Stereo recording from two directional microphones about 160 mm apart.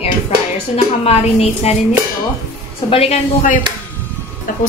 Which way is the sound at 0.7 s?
40° left (ahead or behind).